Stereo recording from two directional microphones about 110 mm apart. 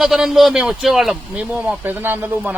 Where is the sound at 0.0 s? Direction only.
5° right (ahead or behind).